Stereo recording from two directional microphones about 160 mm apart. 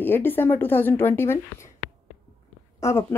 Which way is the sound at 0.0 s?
15° left (ahead or behind).